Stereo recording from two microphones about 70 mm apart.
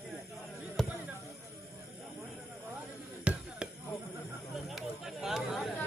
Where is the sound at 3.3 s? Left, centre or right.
Centre.